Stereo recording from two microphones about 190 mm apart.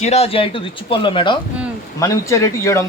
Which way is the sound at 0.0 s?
35° left (ahead or behind).